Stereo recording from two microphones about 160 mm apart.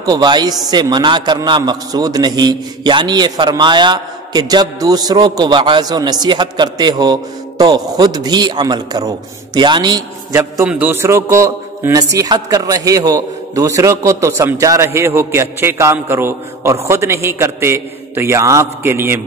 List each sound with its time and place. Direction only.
0.0 s a man's voice: 25° right (ahead or behind)
10.3 s a man's voice: 10° right (ahead or behind)